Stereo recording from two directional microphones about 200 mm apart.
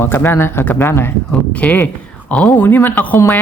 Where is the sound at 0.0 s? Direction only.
10° left (ahead or behind).